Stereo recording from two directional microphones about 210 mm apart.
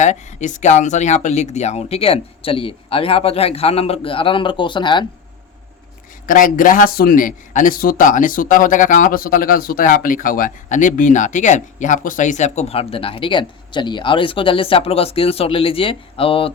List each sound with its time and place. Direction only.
0.0 s speech: 35° left (ahead or behind)
6.2 s speech: 40° left (ahead or behind)